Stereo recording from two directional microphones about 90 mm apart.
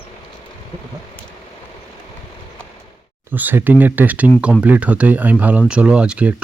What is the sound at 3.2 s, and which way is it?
Speech, 20° right (ahead or behind).